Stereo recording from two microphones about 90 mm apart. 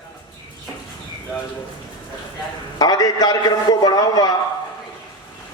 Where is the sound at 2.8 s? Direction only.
45° left (ahead or behind).